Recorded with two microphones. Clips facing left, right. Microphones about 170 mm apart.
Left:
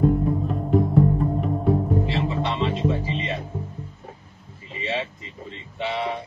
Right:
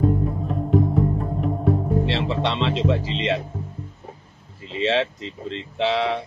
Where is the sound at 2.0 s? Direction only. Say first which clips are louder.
Right 2 dB; 90° right.